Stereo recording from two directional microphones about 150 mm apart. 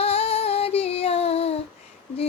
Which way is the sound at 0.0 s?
40° left (ahead or behind).